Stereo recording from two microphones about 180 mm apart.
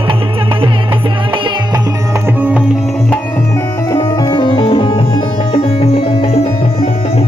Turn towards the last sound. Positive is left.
turn(degrees=30)  # may be behind; listen again after turning